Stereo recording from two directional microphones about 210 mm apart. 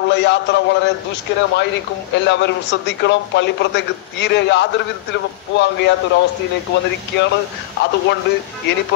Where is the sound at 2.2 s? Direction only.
55° left (ahead or behind).